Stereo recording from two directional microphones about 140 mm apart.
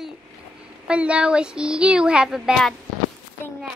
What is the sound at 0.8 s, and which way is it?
Speech, 10° right (ahead or behind).